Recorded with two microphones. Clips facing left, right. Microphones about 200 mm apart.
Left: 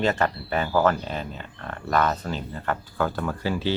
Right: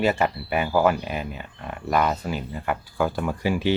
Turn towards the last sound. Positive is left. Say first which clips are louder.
# right 3 dB
turn(degrees=-15)  # may be behind; listen again after turning